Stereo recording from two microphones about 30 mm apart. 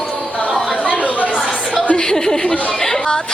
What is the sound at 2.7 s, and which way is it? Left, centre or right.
Chatter, centre.